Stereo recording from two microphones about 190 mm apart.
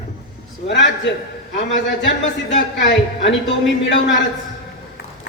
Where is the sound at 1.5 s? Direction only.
75° left (ahead or behind).